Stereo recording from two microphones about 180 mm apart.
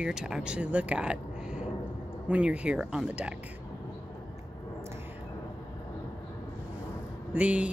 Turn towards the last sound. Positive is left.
turn(degrees=-5)  # may be behind; listen again after turning